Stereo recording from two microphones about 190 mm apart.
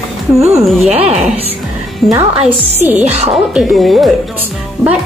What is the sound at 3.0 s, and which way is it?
Speech, 35° right (ahead or behind).